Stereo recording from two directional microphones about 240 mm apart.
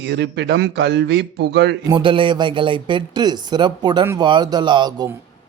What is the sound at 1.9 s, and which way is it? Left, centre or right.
Speech, right.